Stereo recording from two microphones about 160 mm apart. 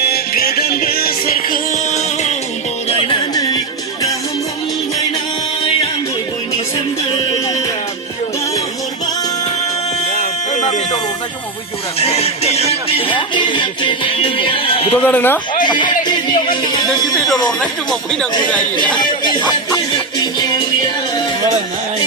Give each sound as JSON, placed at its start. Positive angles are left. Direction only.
{"t": 0.0, "sound": "music", "side_deg": 75}
{"t": 3.1, "sound": "music", "side_deg": 25}
{"t": 10.2, "sound": "music", "side_deg": 50}
{"t": 15.0, "sound": "speech", "side_deg": 10}
{"t": 15.6, "sound": "music", "side_deg": 25}
{"t": 17.2, "sound": "speech", "side_deg": 0}
{"t": 18.9, "sound": "music", "side_deg": 30}